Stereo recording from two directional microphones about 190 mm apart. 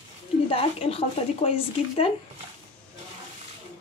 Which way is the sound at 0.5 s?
30° left (ahead or behind).